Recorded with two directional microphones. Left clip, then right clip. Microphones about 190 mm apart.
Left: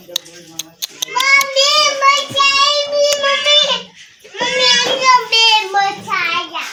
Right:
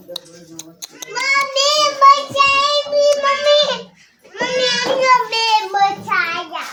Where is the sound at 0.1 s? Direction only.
10° right (ahead or behind).